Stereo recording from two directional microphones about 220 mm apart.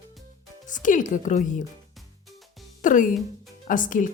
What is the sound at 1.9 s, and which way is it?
Music, centre (ahead or behind).